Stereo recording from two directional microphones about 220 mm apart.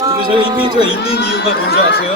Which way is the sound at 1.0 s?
45° left (ahead or behind).